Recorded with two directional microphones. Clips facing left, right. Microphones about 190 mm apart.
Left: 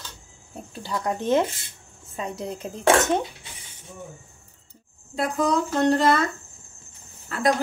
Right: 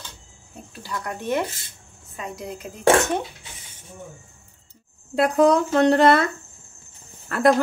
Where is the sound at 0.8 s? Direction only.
20° left (ahead or behind).